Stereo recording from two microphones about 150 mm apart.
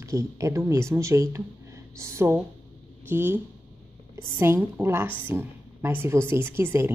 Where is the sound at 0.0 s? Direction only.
20° right (ahead or behind).